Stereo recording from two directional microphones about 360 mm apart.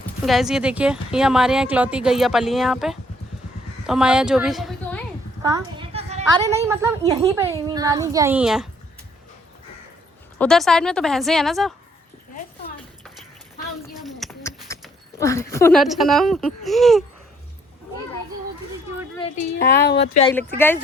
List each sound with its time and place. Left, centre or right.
0.3 s a woman's voice: centre
5.4 s a woman's voice: centre
10.3 s speech: centre
14.0 s a sound: centre
19.5 s a woman's voice: left